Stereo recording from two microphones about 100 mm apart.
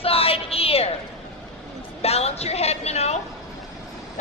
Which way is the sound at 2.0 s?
90° left.